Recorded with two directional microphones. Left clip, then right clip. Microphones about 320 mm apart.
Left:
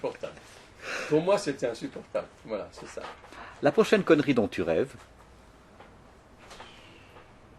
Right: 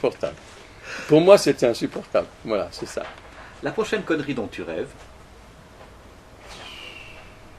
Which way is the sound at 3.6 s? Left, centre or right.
Left.